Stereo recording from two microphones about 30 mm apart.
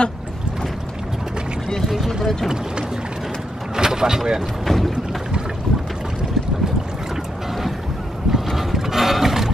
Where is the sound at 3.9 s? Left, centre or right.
Right.